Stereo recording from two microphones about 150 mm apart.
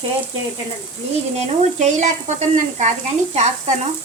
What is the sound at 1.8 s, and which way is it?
Sizzle, 50° right (ahead or behind).